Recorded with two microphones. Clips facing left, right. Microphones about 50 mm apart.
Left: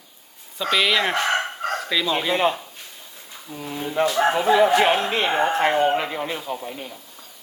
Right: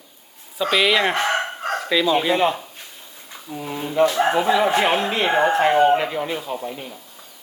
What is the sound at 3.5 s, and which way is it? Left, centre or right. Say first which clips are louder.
Speech: right 3 dB; right.